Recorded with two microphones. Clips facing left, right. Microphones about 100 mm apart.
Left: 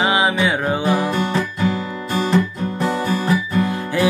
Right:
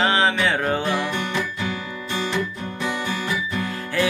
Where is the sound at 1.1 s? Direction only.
40° left (ahead or behind).